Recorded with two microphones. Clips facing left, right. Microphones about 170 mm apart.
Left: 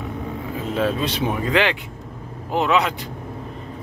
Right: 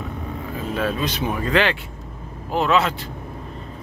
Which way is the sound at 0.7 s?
25° left (ahead or behind).